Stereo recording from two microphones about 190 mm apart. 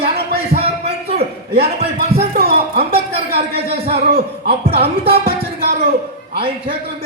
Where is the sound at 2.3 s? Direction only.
55° right (ahead or behind).